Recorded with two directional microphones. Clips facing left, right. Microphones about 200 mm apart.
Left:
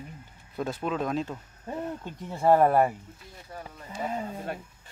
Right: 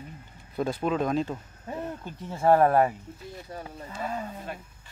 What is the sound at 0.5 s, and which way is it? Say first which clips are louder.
Speech: right 3 dB; centre (ahead or behind).